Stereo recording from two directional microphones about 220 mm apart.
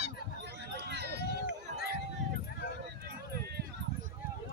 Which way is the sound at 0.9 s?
50° right (ahead or behind).